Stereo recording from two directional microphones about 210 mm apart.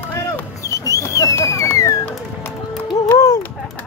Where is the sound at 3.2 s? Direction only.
15° left (ahead or behind).